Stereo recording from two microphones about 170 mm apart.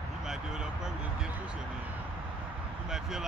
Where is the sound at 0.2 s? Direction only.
5° right (ahead or behind).